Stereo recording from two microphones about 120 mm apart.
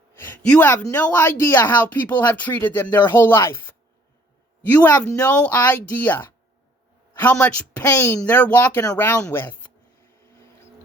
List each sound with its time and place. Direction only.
0.4 s speech: 10° left (ahead or behind)
4.8 s speech: 10° left (ahead or behind)